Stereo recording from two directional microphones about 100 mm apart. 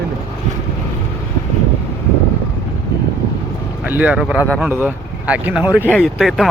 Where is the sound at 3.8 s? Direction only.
15° right (ahead or behind).